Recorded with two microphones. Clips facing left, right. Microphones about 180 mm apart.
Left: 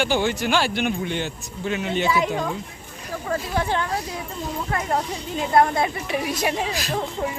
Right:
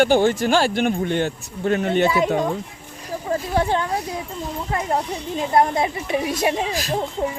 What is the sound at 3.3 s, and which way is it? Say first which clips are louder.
Speech: right 4 dB; 25° right (ahead or behind).